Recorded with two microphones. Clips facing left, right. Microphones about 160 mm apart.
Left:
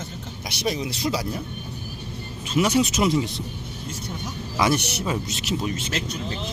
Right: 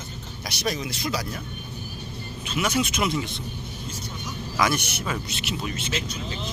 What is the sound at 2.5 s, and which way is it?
Speech, 35° left (ahead or behind).